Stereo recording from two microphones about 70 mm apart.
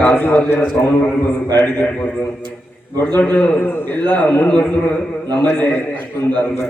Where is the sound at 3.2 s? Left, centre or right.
Centre.